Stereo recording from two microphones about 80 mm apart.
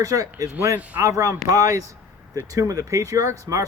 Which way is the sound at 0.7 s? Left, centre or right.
Centre.